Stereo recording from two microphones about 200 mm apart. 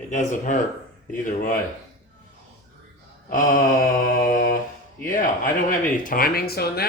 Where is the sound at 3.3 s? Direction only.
40° left (ahead or behind).